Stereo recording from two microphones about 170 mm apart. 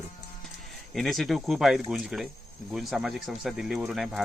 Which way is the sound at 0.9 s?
Centre (ahead or behind).